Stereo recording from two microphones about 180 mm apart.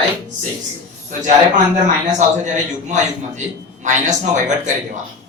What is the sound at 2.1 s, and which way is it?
A man's voice, 40° right (ahead or behind).